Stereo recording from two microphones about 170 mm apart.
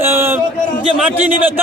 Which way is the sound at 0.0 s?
15° right (ahead or behind).